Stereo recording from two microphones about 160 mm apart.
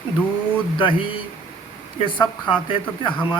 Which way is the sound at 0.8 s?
35° left (ahead or behind).